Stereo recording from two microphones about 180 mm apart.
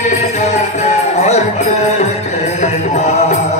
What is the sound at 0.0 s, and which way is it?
Music, 40° left (ahead or behind).